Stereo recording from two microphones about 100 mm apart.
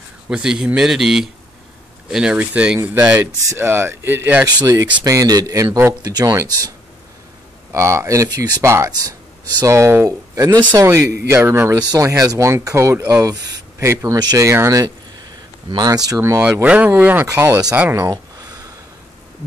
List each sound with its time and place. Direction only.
0.3 s a man's voice: 5° right (ahead or behind); by 4.4 s 20° right (ahead or behind)
4.5 s speech: 40° right (ahead or behind)
5.7 s speech: 20° right (ahead or behind)
6.0 s speech: 35° right (ahead or behind)
7.7 s speech: 30° right (ahead or behind)
16.6 s speech: 15° right (ahead or behind)
18.1 s a sound: 40° right (ahead or behind)